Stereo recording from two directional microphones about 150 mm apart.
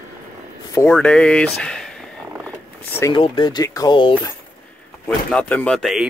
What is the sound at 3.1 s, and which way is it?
Speech, 35° left (ahead or behind).